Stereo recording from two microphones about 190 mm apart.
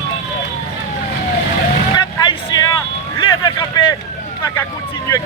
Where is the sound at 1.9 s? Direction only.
20° left (ahead or behind).